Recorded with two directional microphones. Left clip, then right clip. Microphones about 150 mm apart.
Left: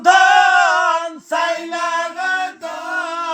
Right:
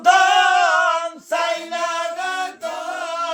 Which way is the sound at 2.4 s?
20° right (ahead or behind).